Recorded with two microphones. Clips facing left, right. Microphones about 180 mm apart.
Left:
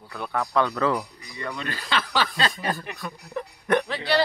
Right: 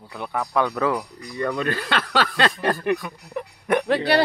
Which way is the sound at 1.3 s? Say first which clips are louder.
Right 8 dB; 45° right (ahead or behind).